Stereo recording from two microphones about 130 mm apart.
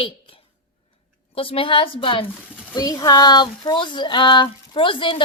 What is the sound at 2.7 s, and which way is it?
Speech, 30° left (ahead or behind).